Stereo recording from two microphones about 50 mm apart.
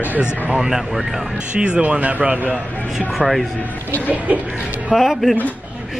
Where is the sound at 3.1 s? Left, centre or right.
Centre.